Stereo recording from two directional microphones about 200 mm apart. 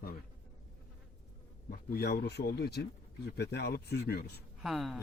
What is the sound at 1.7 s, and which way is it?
A man's voice, 50° left (ahead or behind).